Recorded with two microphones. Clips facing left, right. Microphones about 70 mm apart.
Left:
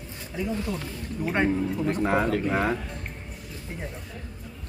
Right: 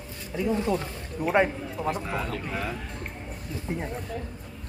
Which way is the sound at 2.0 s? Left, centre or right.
Left.